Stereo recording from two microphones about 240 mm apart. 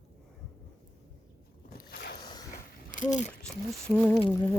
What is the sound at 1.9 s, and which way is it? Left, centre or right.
Vehicle, left.